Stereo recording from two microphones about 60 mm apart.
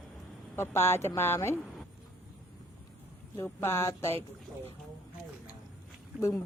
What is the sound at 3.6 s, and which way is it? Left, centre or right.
Speech, left.